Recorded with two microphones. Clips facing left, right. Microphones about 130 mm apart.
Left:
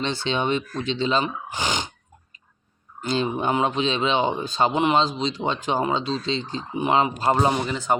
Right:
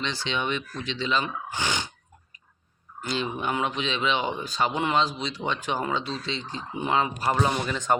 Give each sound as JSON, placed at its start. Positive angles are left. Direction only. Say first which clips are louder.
{"t": 0.3, "sound": "speech", "louder": "left 6 dB", "side_deg": 35}
{"t": 1.5, "sound": "speech", "louder": "left 3 dB", "side_deg": 15}
{"t": 3.2, "sound": "speech", "louder": "left 6 dB", "side_deg": 45}
{"t": 3.4, "sound": "speech", "louder": "left 6 dB", "side_deg": 25}
{"t": 7.5, "sound": "speech", "louder": "left 2 dB", "side_deg": 15}